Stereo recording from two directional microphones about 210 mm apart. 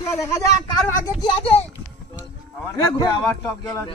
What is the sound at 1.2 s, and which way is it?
Speech, 25° left (ahead or behind).